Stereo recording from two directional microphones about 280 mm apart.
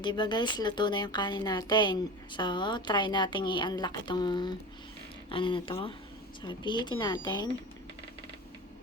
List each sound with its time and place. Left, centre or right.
0.0 s speech: centre